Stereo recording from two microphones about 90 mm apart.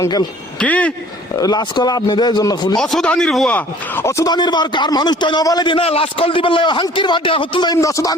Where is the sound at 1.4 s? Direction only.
45° left (ahead or behind).